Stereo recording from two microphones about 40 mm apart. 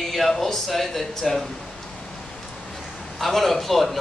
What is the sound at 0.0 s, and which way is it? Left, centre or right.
Speech, centre.